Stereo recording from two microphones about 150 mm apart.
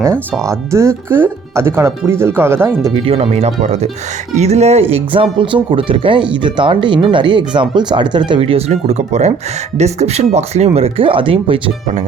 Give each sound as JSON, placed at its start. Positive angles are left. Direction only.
{"t": 0.4, "sound": "speech", "side_deg": -20}
{"t": 2.9, "sound": "speech", "side_deg": -40}